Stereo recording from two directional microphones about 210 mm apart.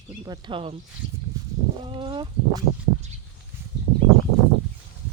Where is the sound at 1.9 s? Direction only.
25° right (ahead or behind).